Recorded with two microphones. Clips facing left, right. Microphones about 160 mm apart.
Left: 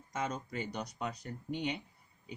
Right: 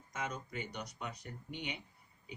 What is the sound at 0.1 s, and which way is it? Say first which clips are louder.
Speech: left 4 dB; 35° left (ahead or behind).